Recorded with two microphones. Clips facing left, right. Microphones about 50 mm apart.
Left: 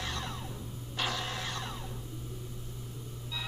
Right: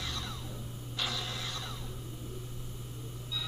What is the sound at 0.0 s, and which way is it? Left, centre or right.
Music, left.